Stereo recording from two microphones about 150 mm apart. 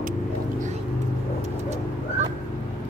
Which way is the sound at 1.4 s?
50° right (ahead or behind).